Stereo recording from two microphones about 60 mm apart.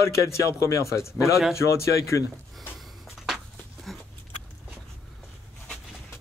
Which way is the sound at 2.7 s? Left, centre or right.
Centre.